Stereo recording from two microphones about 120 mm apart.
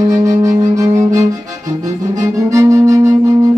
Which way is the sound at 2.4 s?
25° right (ahead or behind).